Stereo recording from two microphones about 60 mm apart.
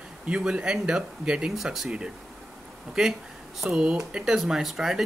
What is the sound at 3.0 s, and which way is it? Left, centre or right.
Speech, centre.